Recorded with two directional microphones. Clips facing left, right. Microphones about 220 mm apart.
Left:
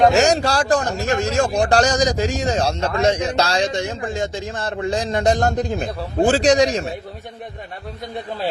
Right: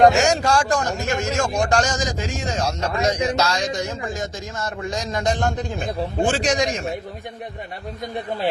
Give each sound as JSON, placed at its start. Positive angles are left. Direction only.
{"t": 0.2, "sound": "a man's voice", "side_deg": 35}